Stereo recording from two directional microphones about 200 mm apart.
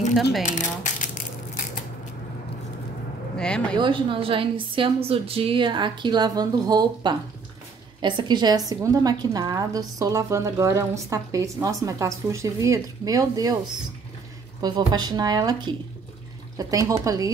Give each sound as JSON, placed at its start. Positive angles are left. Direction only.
{"t": 0.5, "sound": "coin", "side_deg": 35}
{"t": 3.3, "sound": "speech", "side_deg": 5}
{"t": 3.7, "sound": "a woman's voice", "side_deg": -25}
{"t": 14.6, "sound": "a woman's voice", "side_deg": -20}